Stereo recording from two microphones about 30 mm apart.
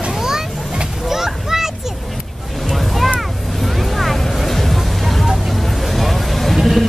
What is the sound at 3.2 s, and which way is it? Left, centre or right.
Vehicle, centre.